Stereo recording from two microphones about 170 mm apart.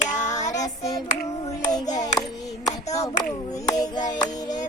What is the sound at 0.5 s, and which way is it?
Hands, 20° left (ahead or behind).